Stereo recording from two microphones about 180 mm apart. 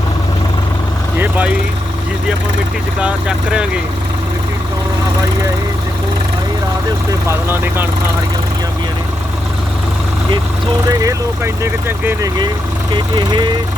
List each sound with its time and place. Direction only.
1.2 s vehicle: 10° right (ahead or behind)
3.0 s speech: 5° right (ahead or behind)
7.3 s speech: 10° right (ahead or behind)
11.0 s speech: 15° right (ahead or behind)